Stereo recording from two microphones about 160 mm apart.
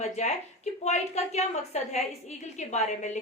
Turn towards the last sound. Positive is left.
turn(degrees=45)  # may be behind; listen again after turning